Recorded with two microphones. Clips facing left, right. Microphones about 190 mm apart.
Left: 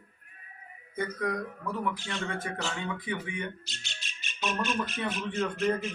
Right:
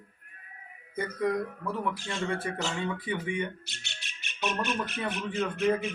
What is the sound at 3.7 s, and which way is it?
Speech, 65° right (ahead or behind).